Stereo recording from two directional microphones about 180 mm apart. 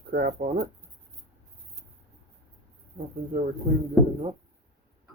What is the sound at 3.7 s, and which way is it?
Speech, 40° right (ahead or behind).